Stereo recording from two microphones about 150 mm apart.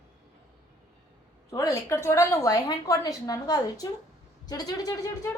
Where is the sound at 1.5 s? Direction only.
20° left (ahead or behind).